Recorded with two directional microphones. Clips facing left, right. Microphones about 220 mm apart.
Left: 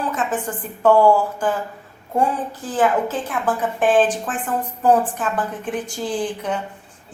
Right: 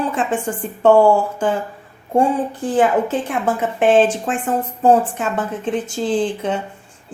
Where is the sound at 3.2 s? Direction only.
25° right (ahead or behind).